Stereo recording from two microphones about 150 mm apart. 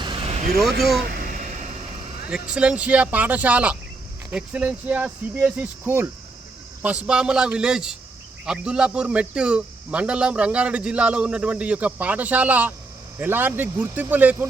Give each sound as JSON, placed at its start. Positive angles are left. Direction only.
{"t": 0.0, "sound": "vehicle", "side_deg": -35}
{"t": 0.8, "sound": "a man's voice", "side_deg": 0}
{"t": 1.0, "sound": "vehicle", "side_deg": -80}
{"t": 2.3, "sound": "a man's voice", "side_deg": -5}